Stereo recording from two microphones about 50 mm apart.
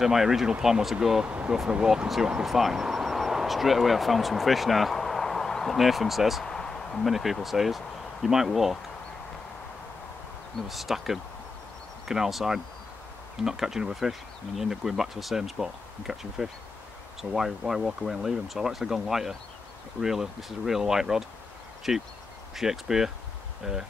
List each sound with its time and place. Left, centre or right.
0.0 s speech: centre
1.2 s speech: right; by 6.4 s centre
6.4 s a sound: centre
7.1 s speech: centre
10.7 s speech: centre